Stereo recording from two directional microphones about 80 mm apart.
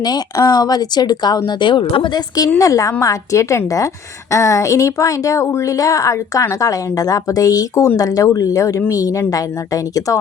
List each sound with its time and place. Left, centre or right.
0.0 s speech: left
1.5 s speech: left
2.6 s speech: left